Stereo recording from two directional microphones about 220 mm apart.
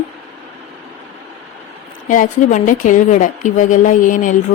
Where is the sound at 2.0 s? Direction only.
35° left (ahead or behind).